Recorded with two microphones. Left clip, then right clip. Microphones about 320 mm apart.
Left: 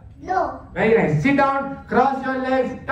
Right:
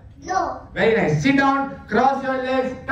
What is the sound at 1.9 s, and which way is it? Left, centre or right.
Speech, centre.